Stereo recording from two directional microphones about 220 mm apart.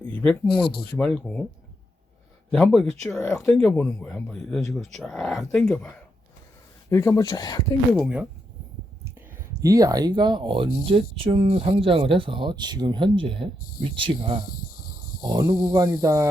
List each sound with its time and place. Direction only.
0.0 s speech: 5° left (ahead or behind)
2.5 s speech: 5° left (ahead or behind)
6.9 s speech: 15° left (ahead or behind)
7.9 s speech: centre (ahead or behind)
9.5 s speech: 15° right (ahead or behind)
14.5 s snake: 40° left (ahead or behind)
15.2 s speech: 20° right (ahead or behind)